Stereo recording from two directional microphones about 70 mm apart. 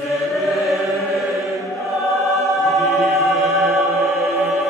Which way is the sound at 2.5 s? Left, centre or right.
Centre.